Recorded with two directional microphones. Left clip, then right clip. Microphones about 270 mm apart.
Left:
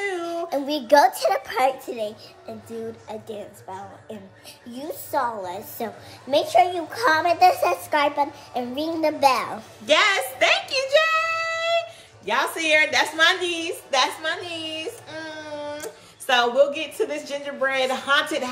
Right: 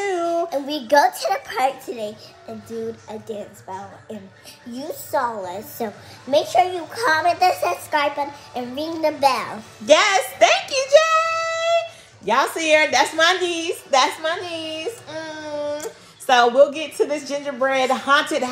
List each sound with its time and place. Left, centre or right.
0.5 s a child's voice: left
9.8 s a sound: centre
12.3 s a woman's voice: centre